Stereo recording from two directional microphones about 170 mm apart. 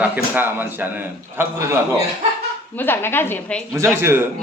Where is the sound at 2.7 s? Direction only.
10° left (ahead or behind).